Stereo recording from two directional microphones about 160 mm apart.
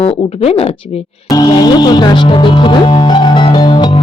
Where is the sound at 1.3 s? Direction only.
25° left (ahead or behind).